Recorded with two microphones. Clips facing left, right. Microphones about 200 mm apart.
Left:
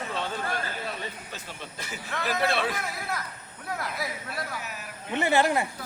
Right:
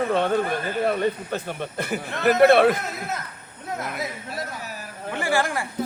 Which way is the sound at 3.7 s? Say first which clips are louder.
Right 4 dB; 20° right (ahead or behind).